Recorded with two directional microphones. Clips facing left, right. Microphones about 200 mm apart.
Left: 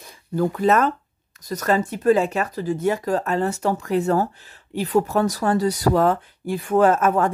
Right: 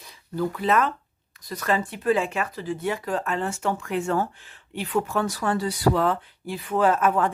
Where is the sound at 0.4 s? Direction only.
45° left (ahead or behind).